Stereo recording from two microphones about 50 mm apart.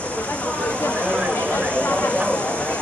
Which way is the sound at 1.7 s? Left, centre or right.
Left.